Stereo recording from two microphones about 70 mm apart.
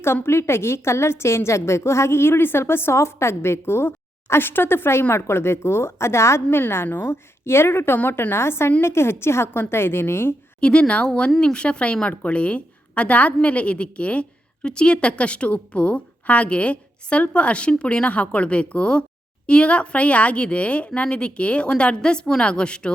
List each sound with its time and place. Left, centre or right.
0.0 s a woman's voice: left
10.6 s a woman's voice: centre